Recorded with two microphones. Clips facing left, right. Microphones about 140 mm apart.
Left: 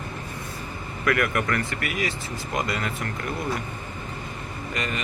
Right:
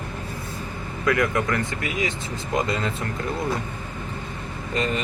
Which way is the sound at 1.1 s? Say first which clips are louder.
Right 2 dB; 20° right (ahead or behind).